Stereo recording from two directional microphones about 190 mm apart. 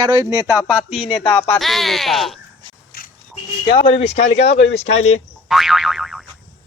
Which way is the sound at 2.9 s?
55° left (ahead or behind).